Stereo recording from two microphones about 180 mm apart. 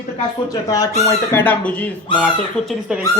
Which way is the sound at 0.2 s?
20° left (ahead or behind).